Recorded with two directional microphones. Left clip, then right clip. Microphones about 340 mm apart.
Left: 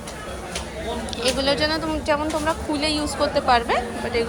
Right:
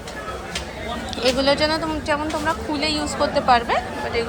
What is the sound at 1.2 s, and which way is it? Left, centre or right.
Speech, centre.